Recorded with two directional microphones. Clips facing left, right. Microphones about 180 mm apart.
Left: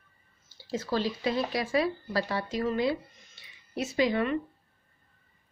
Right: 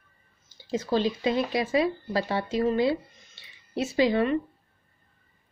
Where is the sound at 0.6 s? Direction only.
20° right (ahead or behind).